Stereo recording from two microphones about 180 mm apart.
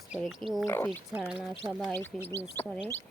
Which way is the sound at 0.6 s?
15° left (ahead or behind).